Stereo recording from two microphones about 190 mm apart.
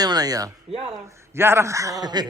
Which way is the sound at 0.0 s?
20° right (ahead or behind).